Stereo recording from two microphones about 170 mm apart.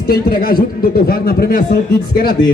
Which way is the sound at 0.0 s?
60° left (ahead or behind).